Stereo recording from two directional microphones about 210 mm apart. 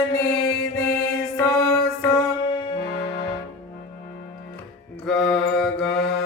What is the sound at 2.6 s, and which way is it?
Music, 25° left (ahead or behind).